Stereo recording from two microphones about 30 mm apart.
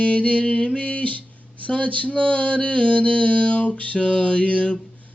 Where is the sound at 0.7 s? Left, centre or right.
Left.